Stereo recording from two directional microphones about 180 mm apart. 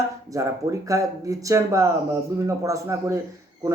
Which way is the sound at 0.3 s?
20° right (ahead or behind).